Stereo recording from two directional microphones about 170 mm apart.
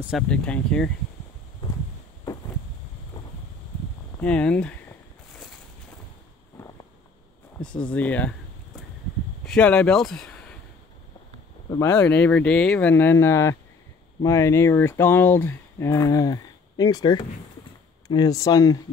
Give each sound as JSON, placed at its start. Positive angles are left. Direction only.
{"t": 0.3, "sound": "speech", "side_deg": 5}
{"t": 4.2, "sound": "speech", "side_deg": 5}
{"t": 7.8, "sound": "speech", "side_deg": 10}
{"t": 9.4, "sound": "speech", "side_deg": 5}
{"t": 11.7, "sound": "speech", "side_deg": 20}